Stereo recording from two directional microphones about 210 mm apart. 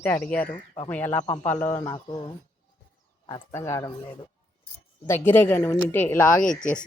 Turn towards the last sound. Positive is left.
turn(degrees=40)  # may be behind; listen again after turning